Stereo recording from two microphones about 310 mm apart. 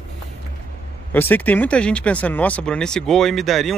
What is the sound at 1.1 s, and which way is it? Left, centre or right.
Speech, centre.